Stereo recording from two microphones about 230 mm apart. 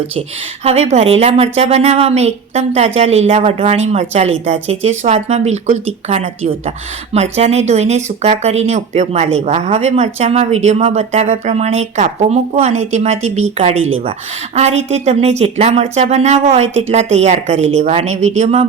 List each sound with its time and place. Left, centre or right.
0.2 s speech: right